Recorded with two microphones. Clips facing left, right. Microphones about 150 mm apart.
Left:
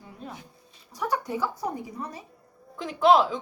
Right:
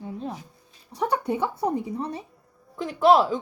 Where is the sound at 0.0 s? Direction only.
25° right (ahead or behind).